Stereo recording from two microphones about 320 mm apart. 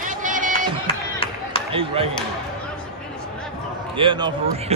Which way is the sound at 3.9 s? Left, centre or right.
Centre.